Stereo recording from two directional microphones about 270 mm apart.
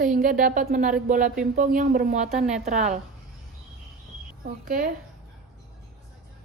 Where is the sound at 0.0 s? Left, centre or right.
Right.